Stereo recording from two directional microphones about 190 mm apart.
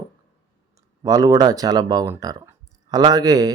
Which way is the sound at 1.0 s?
20° right (ahead or behind).